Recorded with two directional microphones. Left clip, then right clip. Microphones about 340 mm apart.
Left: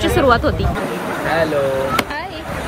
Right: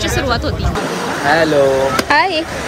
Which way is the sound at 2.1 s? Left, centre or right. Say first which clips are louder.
Right 13 dB; centre.